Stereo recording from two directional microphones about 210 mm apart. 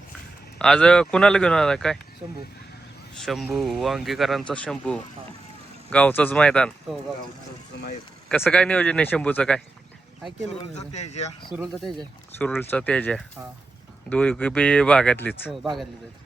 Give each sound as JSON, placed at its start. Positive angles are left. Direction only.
{"t": 0.6, "sound": "speech", "side_deg": 5}
{"t": 3.2, "sound": "speech", "side_deg": 0}
{"t": 8.3, "sound": "speech", "side_deg": 5}
{"t": 10.5, "sound": "speech", "side_deg": 30}
{"t": 11.5, "sound": "speech", "side_deg": 0}